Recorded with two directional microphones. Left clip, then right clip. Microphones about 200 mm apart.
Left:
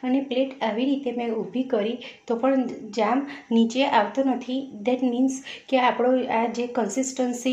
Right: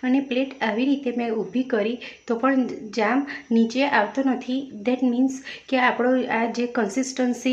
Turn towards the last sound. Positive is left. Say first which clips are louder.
# right 1 dB
turn(degrees=-20)  # may be behind; listen again after turning